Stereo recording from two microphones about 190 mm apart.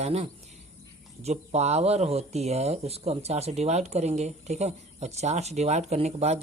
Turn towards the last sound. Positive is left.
turn(degrees=-35)  # may be behind; listen again after turning